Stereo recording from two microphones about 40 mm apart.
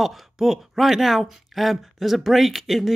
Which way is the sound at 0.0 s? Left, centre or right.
Centre.